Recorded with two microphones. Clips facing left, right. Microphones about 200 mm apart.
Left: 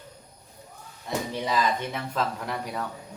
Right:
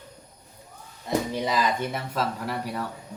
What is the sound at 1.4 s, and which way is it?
Speech, 10° right (ahead or behind).